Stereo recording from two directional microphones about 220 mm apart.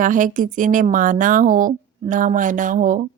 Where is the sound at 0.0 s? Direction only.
35° right (ahead or behind).